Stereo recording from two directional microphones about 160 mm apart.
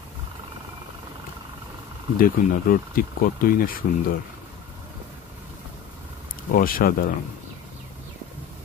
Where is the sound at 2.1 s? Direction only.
60° left (ahead or behind).